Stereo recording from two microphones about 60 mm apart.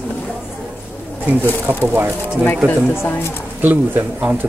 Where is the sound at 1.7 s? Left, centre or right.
Right.